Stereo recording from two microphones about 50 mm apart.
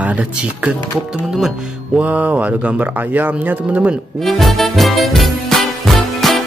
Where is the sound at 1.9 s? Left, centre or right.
Right.